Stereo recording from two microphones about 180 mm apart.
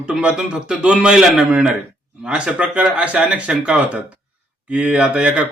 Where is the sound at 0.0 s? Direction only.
5° right (ahead or behind).